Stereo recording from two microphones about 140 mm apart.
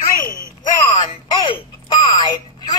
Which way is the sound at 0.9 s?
35° left (ahead or behind).